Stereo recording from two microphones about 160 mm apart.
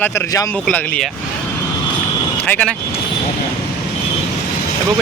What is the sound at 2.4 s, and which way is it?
Speech, 10° left (ahead or behind).